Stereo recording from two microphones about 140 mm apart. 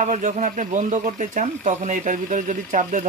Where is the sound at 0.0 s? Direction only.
60° right (ahead or behind).